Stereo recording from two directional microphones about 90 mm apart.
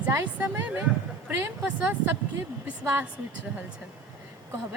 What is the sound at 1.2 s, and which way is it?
Speech, 25° right (ahead or behind).